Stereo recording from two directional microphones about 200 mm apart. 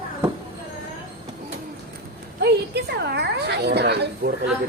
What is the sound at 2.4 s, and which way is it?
A woman's voice, 55° right (ahead or behind).